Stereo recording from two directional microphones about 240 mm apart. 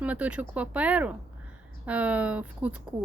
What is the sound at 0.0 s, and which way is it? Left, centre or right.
Speech, centre.